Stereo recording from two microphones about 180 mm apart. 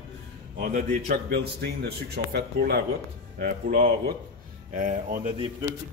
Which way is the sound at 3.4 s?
45° right (ahead or behind).